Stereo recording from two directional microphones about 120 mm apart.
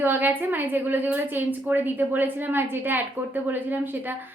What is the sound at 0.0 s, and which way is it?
A woman's voice, 15° right (ahead or behind).